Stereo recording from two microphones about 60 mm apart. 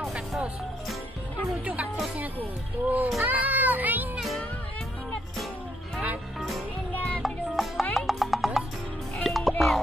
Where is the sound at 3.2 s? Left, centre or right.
Right.